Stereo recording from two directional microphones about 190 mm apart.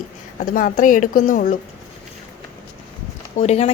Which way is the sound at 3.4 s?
35° left (ahead or behind).